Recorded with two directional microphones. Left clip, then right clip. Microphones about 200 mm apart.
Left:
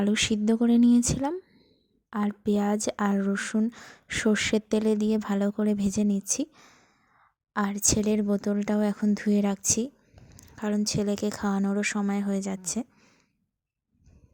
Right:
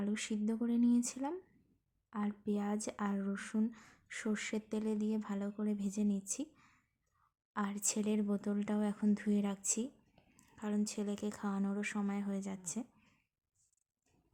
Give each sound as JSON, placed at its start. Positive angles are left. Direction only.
{"t": 0.0, "sound": "speech", "side_deg": 40}